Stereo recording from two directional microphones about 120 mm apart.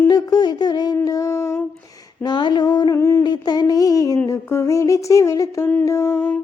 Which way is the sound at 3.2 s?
35° left (ahead or behind).